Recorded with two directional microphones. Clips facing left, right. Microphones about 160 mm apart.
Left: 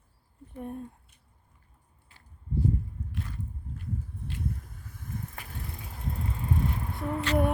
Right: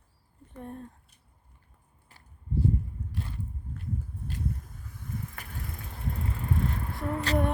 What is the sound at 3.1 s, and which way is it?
Biting, 30° right (ahead or behind).